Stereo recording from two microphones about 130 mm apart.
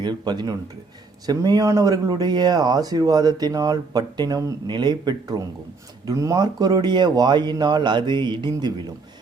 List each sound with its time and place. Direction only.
0.0 s speech: 35° right (ahead or behind)